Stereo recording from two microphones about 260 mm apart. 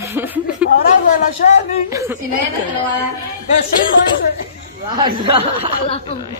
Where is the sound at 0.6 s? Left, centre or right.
Left.